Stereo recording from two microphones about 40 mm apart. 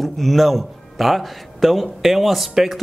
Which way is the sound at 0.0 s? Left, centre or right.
Centre.